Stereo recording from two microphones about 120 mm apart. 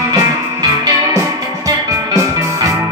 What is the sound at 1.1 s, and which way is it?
Music, 30° right (ahead or behind).